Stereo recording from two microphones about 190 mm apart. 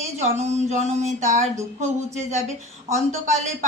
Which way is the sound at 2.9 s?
40° right (ahead or behind).